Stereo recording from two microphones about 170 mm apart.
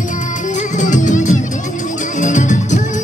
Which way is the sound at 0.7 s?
45° left (ahead or behind).